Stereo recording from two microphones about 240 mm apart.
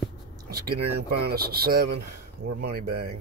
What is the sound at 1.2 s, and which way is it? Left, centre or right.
Speech, right.